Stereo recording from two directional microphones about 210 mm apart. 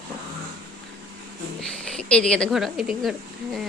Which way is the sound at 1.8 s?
5° left (ahead or behind).